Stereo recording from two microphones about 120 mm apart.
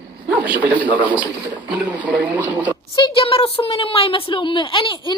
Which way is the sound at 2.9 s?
45° left (ahead or behind).